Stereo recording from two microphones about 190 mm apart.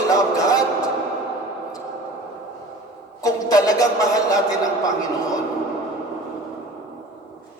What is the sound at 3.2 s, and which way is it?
Music, 20° left (ahead or behind).